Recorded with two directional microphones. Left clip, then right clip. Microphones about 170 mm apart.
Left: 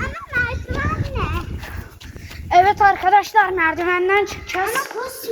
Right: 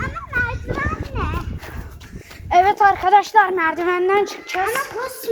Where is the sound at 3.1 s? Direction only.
35° right (ahead or behind).